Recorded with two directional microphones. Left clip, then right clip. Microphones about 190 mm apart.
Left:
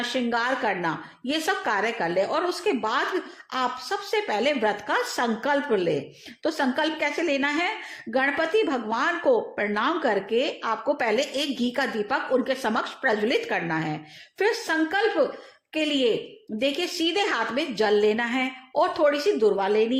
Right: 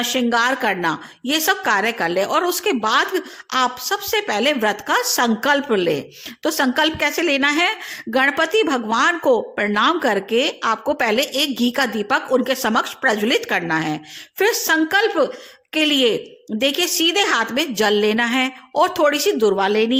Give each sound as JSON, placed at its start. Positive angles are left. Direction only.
{"t": 0.0, "sound": "a woman's voice", "side_deg": -30}